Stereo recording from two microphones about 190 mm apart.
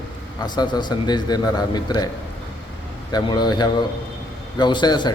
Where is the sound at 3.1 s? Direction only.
20° left (ahead or behind).